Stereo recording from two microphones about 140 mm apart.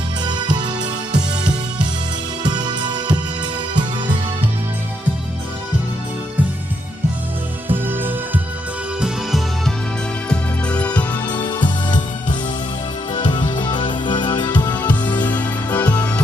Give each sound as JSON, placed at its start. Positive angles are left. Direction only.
{"t": 0.3, "sound": "music", "side_deg": -30}
{"t": 2.4, "sound": "music", "side_deg": -30}
{"t": 7.7, "sound": "music", "side_deg": -15}
{"t": 10.2, "sound": "music", "side_deg": 10}
{"t": 11.1, "sound": "music", "side_deg": 30}
{"t": 13.1, "sound": "music", "side_deg": 35}
{"t": 14.8, "sound": "music", "side_deg": 10}
{"t": 15.8, "sound": "music", "side_deg": 30}